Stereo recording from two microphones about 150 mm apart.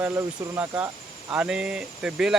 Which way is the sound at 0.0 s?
15° right (ahead or behind).